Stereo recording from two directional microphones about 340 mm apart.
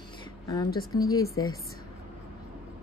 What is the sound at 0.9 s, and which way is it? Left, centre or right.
Speech, centre.